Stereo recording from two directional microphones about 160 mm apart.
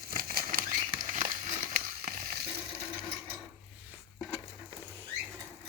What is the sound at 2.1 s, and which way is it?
Frying, 70° right (ahead or behind).